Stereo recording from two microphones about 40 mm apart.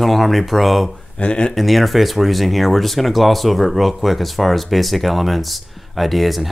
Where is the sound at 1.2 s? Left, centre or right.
Left.